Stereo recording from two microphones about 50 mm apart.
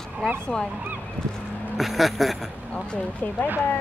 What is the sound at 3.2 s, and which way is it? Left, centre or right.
Speech, left.